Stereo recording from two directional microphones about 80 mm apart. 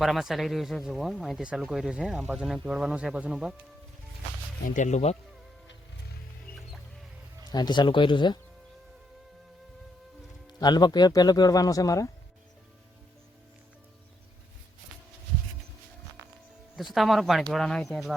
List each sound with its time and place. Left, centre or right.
0.0 s speech: centre
7.5 s speech: left
10.4 s speech: left
16.7 s speech: centre